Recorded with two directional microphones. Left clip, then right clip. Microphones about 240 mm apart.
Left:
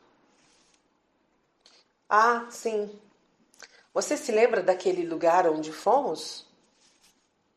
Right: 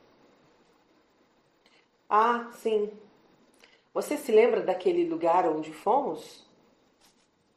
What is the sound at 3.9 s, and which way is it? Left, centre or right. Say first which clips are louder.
Speech: right 2 dB; left.